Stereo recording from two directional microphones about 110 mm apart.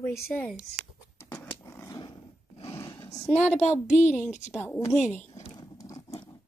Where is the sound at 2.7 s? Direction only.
25° left (ahead or behind).